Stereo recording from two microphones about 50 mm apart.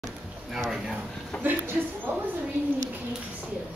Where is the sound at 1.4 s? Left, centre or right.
Right.